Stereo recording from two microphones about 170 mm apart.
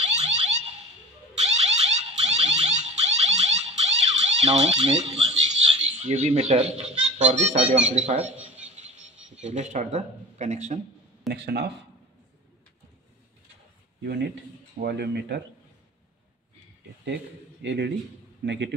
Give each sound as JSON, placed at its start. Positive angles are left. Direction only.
{"t": 0.0, "sound": "car alarm", "side_deg": -40}
{"t": 5.9, "sound": "speech", "side_deg": -40}
{"t": 9.4, "sound": "speech", "side_deg": -40}
{"t": 11.3, "sound": "speech", "side_deg": -75}
{"t": 14.0, "sound": "speech", "side_deg": -70}
{"t": 17.0, "sound": "a man's voice", "side_deg": -85}